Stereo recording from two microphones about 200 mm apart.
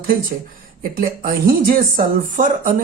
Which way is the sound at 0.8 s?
45° right (ahead or behind).